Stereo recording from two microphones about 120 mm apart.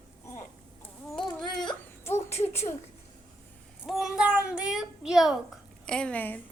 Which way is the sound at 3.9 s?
5° right (ahead or behind).